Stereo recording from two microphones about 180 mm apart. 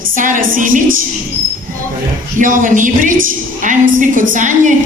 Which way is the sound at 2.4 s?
45° right (ahead or behind).